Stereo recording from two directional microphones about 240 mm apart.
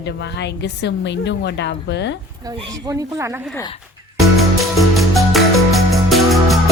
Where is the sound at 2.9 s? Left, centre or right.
Centre.